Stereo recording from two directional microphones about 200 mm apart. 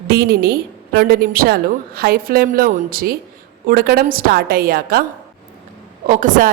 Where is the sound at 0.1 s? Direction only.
50° right (ahead or behind).